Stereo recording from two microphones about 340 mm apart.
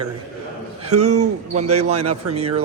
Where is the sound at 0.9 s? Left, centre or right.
Right.